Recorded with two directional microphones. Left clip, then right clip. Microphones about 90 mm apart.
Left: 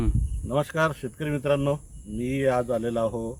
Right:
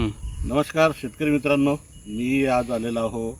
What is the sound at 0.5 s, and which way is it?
Speech, 70° left (ahead or behind).